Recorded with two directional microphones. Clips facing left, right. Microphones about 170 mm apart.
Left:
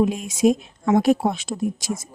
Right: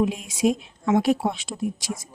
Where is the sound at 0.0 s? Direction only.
45° left (ahead or behind).